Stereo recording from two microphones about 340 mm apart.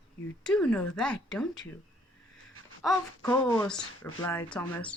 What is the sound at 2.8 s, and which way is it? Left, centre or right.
Speech, centre.